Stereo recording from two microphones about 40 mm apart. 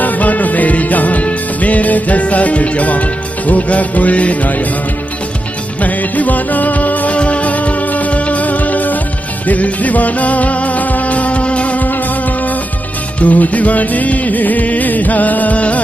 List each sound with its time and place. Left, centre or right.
0.0 s music: left
5.8 s music: left
7.2 s music: left
13.2 s music: left